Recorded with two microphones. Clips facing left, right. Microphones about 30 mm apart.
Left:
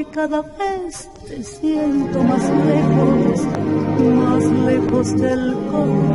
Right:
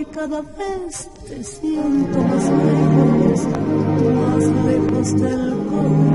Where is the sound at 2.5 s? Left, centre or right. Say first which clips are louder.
Even; left.